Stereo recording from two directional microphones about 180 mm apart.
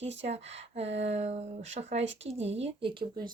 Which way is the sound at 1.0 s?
40° right (ahead or behind).